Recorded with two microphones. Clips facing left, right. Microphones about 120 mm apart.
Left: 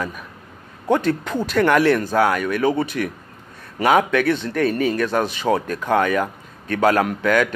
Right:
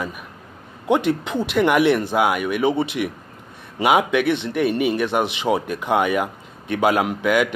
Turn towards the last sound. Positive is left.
turn(degrees=-10)  # may be behind; listen again after turning